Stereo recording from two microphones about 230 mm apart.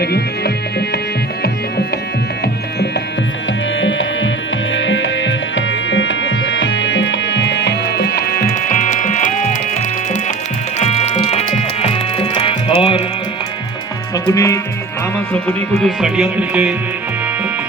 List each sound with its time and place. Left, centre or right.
0.0 s music: left
3.8 s music: left
10.8 s music: left
14.3 s speech: centre
15.3 s music: centre